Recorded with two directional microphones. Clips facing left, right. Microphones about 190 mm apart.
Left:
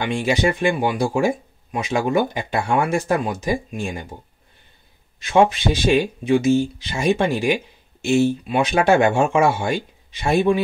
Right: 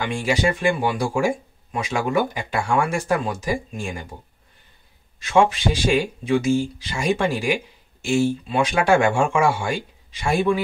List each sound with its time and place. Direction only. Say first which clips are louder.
0.0 s speech: left 2 dB; 20° left (ahead or behind)
5.2 s speech: left 2 dB; 20° left (ahead or behind)